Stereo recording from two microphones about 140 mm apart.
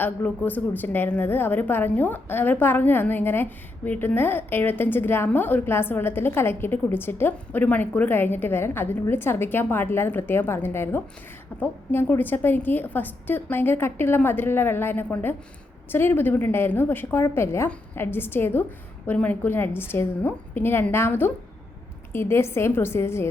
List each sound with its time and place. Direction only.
0.0 s a woman's voice: 15° left (ahead or behind)